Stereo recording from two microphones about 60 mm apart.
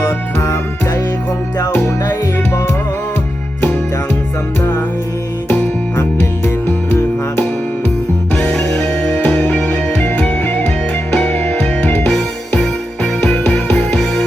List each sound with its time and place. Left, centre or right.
0.3 s music: left
8.4 s music: centre
9.2 s music: left
13.2 s music: centre